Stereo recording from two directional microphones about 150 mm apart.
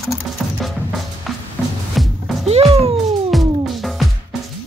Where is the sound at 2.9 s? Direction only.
Centre (ahead or behind).